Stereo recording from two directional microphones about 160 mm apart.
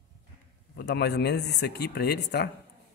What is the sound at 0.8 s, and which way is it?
Speech, 90° left.